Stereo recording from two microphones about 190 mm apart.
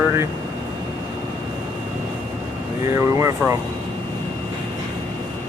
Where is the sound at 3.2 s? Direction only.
15° right (ahead or behind).